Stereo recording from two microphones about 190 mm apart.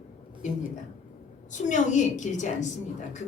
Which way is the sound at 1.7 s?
40° left (ahead or behind).